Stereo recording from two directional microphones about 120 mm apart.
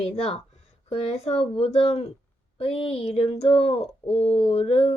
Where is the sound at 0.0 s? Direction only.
55° left (ahead or behind).